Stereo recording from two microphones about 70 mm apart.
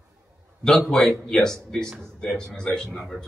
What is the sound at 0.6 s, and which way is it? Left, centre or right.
A man's voice, centre.